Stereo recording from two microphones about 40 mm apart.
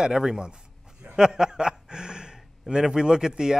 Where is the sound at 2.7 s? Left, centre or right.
Centre.